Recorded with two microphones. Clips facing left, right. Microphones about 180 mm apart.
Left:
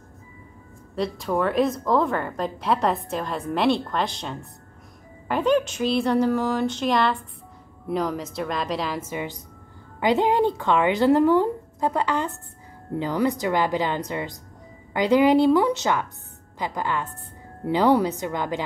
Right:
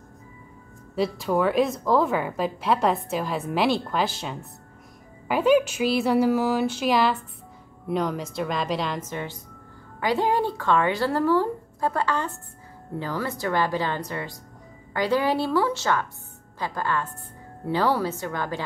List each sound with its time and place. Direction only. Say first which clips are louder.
0.9 s a woman's voice: right 1 dB; centre (ahead or behind); by 18.6 s 20° left (ahead or behind)